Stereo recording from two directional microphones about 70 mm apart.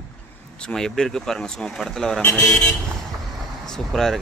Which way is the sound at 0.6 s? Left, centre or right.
Centre.